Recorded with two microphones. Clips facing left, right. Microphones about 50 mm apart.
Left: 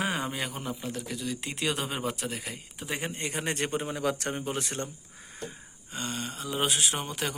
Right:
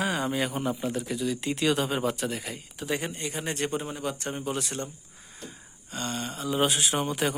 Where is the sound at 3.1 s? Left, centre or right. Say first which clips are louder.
Even; left.